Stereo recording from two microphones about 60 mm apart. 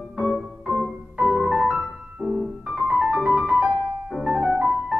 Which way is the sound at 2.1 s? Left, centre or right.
Centre.